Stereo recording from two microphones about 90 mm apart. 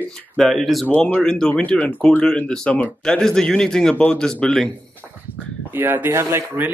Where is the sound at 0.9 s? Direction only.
20° left (ahead or behind).